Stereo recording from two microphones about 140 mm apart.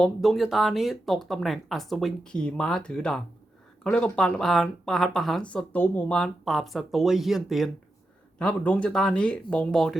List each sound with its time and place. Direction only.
0.0 s speech: centre (ahead or behind)
8.4 s speech: 10° left (ahead or behind)